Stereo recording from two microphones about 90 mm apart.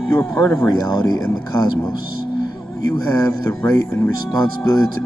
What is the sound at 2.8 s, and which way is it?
Speech, 45° left (ahead or behind).